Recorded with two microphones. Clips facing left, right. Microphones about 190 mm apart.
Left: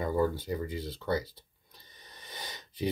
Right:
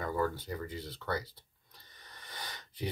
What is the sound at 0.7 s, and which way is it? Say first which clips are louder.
Speech: left 4 dB; 10° left (ahead or behind).